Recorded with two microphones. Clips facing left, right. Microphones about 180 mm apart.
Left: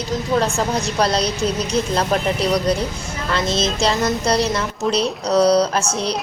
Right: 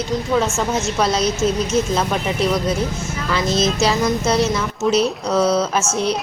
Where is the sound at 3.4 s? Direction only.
30° left (ahead or behind).